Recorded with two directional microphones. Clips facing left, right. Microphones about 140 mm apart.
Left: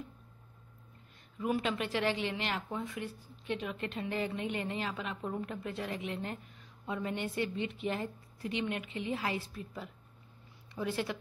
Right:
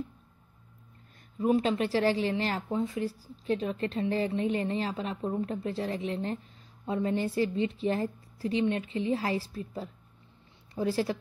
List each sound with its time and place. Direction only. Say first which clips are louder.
1.4 s speech: right 7 dB; 35° right (ahead or behind)